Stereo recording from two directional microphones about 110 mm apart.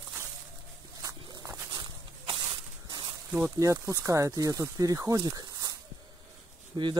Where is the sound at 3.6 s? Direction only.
30° right (ahead or behind).